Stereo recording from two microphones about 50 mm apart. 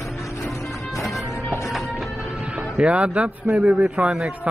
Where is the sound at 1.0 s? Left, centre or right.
Centre.